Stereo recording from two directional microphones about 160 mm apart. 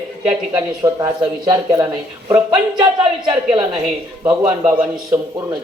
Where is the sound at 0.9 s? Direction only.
20° right (ahead or behind).